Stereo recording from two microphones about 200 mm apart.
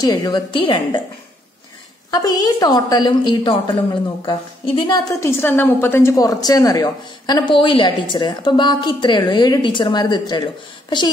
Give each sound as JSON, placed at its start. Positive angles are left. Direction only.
{"t": 0.0, "sound": "a woman's voice", "side_deg": 20}
{"t": 2.0, "sound": "a woman's voice", "side_deg": 20}
{"t": 5.4, "sound": "a woman's voice", "side_deg": 10}